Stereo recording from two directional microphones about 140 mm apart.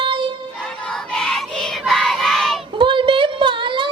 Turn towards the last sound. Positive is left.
turn(degrees=-35)  # may be behind; listen again after turning